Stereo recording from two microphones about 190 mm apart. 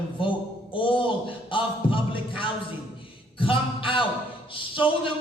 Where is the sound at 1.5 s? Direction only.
25° left (ahead or behind).